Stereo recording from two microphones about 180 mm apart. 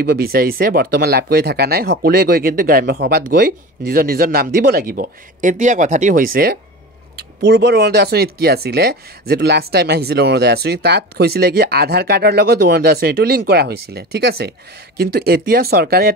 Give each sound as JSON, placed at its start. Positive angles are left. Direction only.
{"t": 0.0, "sound": "speech", "side_deg": -55}
{"t": 7.2, "sound": "speech", "side_deg": -70}